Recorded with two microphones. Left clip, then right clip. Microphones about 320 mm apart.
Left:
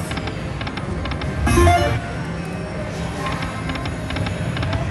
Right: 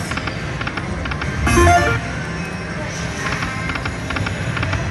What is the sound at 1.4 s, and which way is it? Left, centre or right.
Music, centre.